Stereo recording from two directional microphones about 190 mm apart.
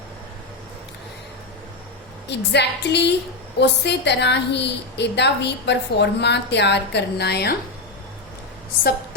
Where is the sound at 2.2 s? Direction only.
65° left (ahead or behind).